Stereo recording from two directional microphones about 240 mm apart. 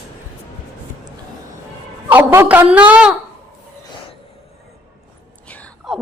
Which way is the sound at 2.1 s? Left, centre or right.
Centre.